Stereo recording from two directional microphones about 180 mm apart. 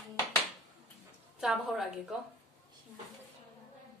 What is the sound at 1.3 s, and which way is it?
Speech, centre (ahead or behind).